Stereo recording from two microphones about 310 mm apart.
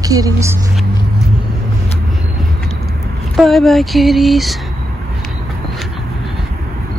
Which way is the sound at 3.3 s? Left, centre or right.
Centre.